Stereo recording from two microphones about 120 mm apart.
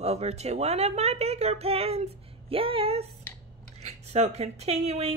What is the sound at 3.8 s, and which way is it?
Speech, 70° right (ahead or behind).